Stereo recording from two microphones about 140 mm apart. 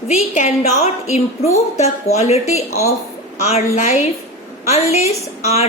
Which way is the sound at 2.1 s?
50° left (ahead or behind).